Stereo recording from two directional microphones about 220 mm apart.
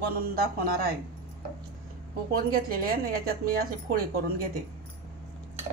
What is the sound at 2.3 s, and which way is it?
Speech, 40° right (ahead or behind).